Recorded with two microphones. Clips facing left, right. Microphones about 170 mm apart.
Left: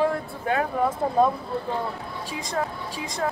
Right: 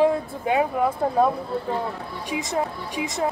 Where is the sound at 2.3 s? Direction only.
20° right (ahead or behind).